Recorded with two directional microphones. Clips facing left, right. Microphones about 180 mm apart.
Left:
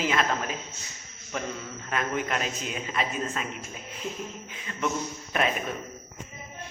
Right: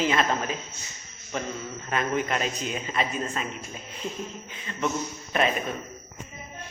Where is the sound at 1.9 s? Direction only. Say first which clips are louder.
Right 2 dB; centre (ahead or behind).